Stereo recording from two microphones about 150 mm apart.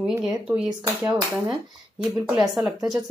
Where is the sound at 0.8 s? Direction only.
20° right (ahead or behind).